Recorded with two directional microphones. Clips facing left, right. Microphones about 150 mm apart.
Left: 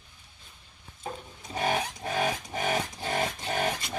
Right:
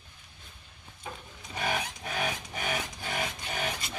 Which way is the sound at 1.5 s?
30° left (ahead or behind).